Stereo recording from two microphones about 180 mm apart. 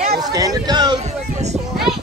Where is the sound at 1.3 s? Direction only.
40° right (ahead or behind).